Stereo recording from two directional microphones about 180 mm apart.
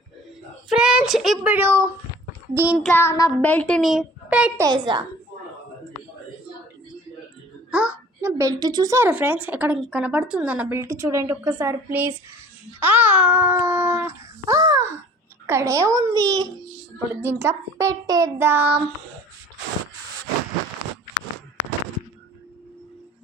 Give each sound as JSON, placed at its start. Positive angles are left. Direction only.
{"t": 0.7, "sound": "a child's voice", "side_deg": -5}
{"t": 2.9, "sound": "a child's voice", "side_deg": 15}
{"t": 4.6, "sound": "a child's voice", "side_deg": -25}
{"t": 7.7, "sound": "a child's voice", "side_deg": -5}